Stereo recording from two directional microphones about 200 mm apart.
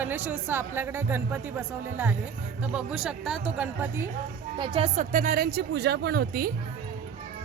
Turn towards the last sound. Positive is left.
turn(degrees=-50)  # may be behind; listen again after turning